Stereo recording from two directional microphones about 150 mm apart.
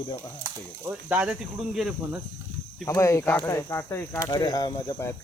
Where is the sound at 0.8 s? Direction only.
10° right (ahead or behind).